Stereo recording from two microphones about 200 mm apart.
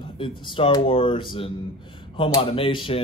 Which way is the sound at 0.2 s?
25° left (ahead or behind).